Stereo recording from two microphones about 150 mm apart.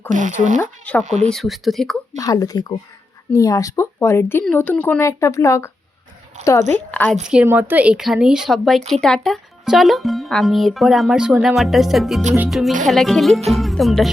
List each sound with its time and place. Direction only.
0.1 s speech: 55° right (ahead or behind)
0.6 s speech: 10° left (ahead or behind)
2.1 s speech: 20° left (ahead or behind)
6.3 s speech: 55° right (ahead or behind)
6.9 s a woman's voice: 10° left (ahead or behind)
7.3 s speech: 10° right (ahead or behind)